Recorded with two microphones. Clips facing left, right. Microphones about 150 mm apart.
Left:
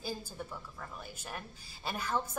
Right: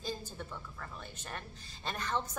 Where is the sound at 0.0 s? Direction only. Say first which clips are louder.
Even; 10° left (ahead or behind).